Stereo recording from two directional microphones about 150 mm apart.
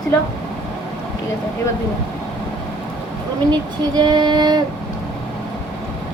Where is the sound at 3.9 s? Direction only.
30° right (ahead or behind).